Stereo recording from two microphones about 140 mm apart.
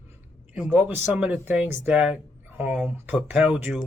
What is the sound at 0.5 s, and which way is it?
Speech, 5° right (ahead or behind).